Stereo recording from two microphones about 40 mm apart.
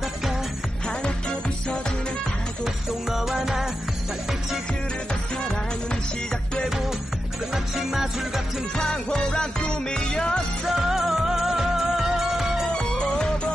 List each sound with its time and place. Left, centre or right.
2.6 s music: centre
7.5 s music: centre
8.7 s music: left
10.7 s music: centre
12.7 s music: left